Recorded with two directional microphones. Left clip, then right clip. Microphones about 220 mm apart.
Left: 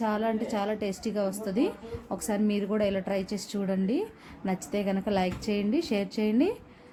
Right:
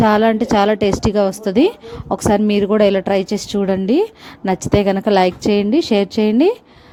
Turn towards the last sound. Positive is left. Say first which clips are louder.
# right 13 dB
turn(degrees=-35)  # may be behind; listen again after turning